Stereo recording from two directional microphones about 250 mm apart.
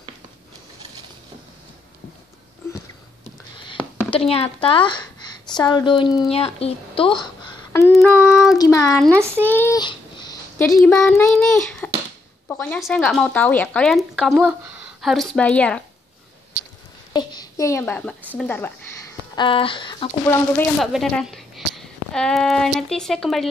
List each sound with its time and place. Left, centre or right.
4.1 s a woman's voice: left
7.7 s child singing: centre
8.5 s speech: centre
9.4 s a sound: centre
10.8 s speech: centre
17.1 s a sound: centre
18.3 s speech: centre
19.3 s speech: centre